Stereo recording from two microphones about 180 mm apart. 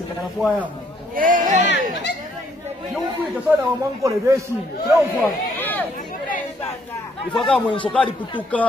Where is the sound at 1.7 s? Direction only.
75° left (ahead or behind).